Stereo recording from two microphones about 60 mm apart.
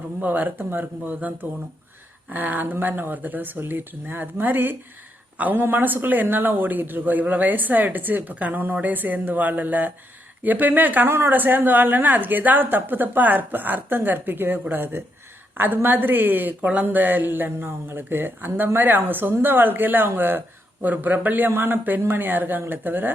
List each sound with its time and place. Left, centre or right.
0.2 s a man's voice: right
11.1 s speech: right
11.3 s speech: right